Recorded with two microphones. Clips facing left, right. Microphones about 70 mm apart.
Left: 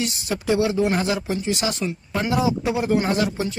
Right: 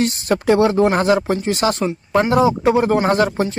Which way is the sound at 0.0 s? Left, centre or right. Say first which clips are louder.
Right 8 dB; right.